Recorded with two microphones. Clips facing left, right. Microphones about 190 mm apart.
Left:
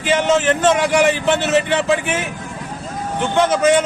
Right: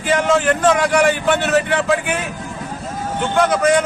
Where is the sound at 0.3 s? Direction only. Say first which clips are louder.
Even; 25° left (ahead or behind).